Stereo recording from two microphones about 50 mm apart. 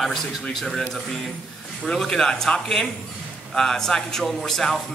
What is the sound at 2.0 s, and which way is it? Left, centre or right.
A man's voice, centre.